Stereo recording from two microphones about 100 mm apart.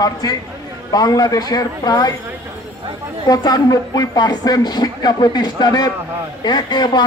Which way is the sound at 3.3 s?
40° left (ahead or behind).